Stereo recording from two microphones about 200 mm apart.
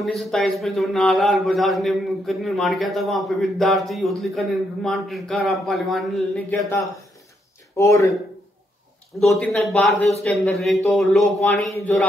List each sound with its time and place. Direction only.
0.0 s a man's voice: centre (ahead or behind)
7.7 s speech: 15° left (ahead or behind)
9.2 s a man's voice: centre (ahead or behind)